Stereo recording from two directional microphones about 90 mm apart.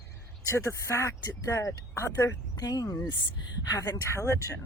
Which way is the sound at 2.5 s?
45° left (ahead or behind).